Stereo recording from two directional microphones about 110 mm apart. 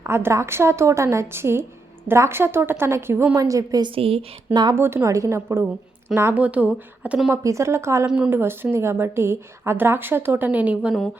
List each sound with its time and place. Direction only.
0.0 s a woman's voice: 25° right (ahead or behind)
3.9 s a woman's voice: 60° right (ahead or behind)
4.7 s a woman's voice: 20° right (ahead or behind)
7.4 s a woman's voice: 25° right (ahead or behind)
8.0 s a woman's voice: 10° right (ahead or behind)